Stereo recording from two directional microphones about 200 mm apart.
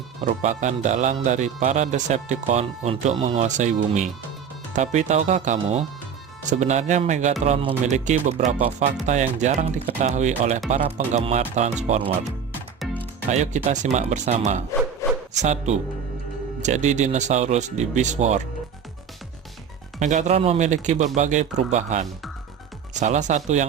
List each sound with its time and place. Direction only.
0.3 s speech: 35° right (ahead or behind)
13.3 s speech: 35° right (ahead or behind)
15.0 s bow-wow: 15° left (ahead or behind)
15.4 s speech: 35° right (ahead or behind)
20.0 s speech: 35° right (ahead or behind)